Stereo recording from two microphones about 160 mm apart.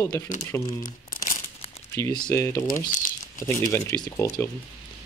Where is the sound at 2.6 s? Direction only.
55° left (ahead or behind).